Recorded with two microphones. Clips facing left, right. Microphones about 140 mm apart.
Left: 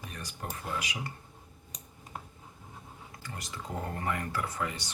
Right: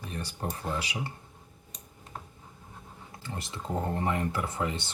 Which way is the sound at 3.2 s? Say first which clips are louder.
Right 4 dB; 25° right (ahead or behind).